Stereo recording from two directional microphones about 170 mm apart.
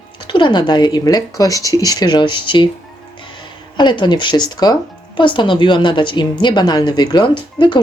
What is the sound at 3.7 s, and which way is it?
Speech, 25° left (ahead or behind).